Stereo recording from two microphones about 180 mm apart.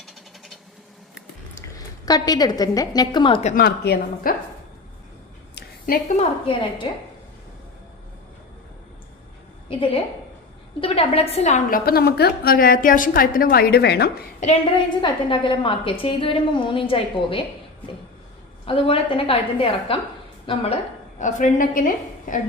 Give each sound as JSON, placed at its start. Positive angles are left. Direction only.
{"t": 0.0, "sound": "a sound", "side_deg": 0}
{"t": 2.0, "sound": "a woman's voice", "side_deg": 20}
{"t": 3.4, "sound": "a woman's voice", "side_deg": 50}
{"t": 5.5, "sound": "a sound", "side_deg": 55}
{"t": 6.1, "sound": "a woman's voice", "side_deg": 35}
{"t": 10.8, "sound": "a woman's voice", "side_deg": 30}
{"t": 14.4, "sound": "a woman's voice", "side_deg": 30}
{"t": 18.6, "sound": "a woman's voice", "side_deg": 30}
{"t": 21.2, "sound": "a woman's voice", "side_deg": 45}